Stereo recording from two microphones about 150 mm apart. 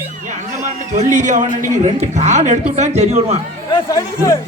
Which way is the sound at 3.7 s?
20° left (ahead or behind).